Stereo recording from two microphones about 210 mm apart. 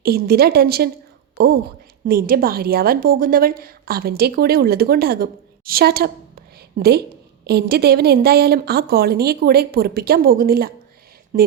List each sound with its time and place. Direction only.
0.0 s a woman's voice: 50° right (ahead or behind)
2.0 s a woman's voice: 45° right (ahead or behind)